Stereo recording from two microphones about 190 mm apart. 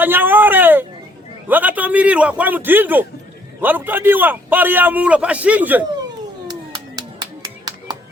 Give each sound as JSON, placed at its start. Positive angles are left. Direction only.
{"t": 0.0, "sound": "a sound", "side_deg": -10}
{"t": 1.5, "sound": "a man's voice", "side_deg": -10}
{"t": 7.4, "sound": "music", "side_deg": -20}